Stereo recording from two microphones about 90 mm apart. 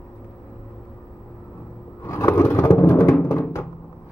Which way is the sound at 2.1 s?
30° left (ahead or behind).